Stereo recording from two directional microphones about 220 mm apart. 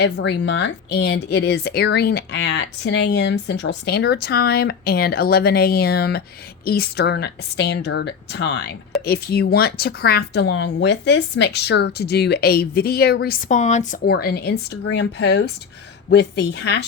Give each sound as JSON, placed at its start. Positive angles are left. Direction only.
{"t": 0.0, "sound": "speech", "side_deg": 50}
{"t": 14.0, "sound": "speech", "side_deg": 45}